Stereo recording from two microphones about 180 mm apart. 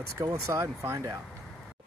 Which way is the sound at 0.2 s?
15° right (ahead or behind).